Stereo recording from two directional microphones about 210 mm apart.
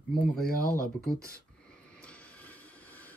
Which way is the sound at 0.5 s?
45° left (ahead or behind).